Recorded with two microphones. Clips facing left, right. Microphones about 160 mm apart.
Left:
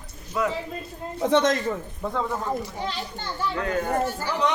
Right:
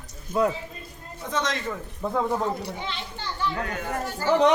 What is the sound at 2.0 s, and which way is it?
Speech, 10° right (ahead or behind).